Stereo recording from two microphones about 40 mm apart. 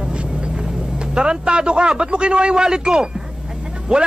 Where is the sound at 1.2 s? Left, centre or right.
Right.